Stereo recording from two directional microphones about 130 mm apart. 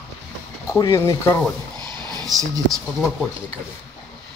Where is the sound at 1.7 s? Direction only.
35° right (ahead or behind).